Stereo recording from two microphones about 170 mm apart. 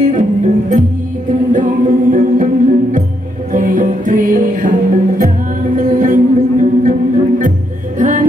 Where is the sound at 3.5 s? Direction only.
50° right (ahead or behind).